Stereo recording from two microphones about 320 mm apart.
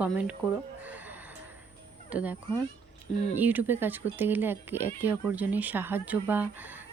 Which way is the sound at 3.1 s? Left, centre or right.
Centre.